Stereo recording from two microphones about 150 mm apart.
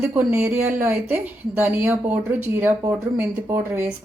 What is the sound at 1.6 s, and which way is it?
Speech, 15° right (ahead or behind).